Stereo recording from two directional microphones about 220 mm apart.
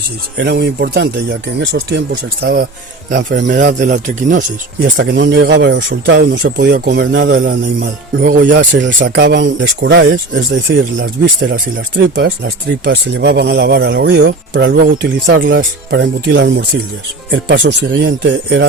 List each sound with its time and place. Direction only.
0.3 s speech: 45° right (ahead or behind)
3.5 s speech: 35° right (ahead or behind)
4.9 s speech: 55° right (ahead or behind)
7.0 s speech: 55° right (ahead or behind)
7.4 s speech: 45° right (ahead or behind)
8.8 s speech: 50° right (ahead or behind)